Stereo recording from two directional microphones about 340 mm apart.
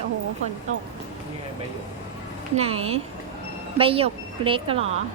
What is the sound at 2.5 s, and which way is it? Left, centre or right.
A woman's voice, centre.